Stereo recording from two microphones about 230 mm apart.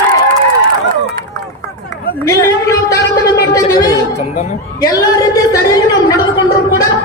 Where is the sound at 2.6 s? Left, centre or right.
Centre.